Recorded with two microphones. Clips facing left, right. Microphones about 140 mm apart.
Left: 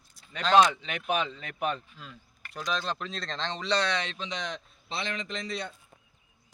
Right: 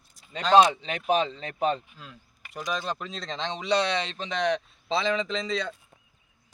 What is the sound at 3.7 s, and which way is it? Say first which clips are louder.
Speech: right 4 dB; 25° right (ahead or behind).